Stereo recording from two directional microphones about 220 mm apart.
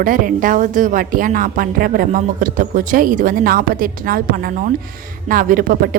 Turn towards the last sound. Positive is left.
turn(degrees=-40)  # may be behind; listen again after turning